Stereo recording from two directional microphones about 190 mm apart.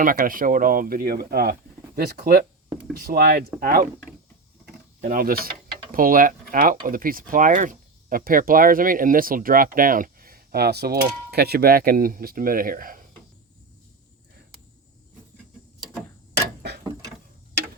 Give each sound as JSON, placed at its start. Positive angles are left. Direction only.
{"t": 0.0, "sound": "speech", "side_deg": -45}
{"t": 4.9, "sound": "speech", "side_deg": -45}
{"t": 16.8, "sound": "a sound", "side_deg": -15}